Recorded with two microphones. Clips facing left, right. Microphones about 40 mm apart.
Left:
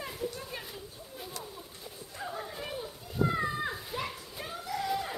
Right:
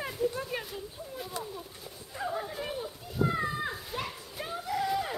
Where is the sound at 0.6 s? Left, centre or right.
Centre.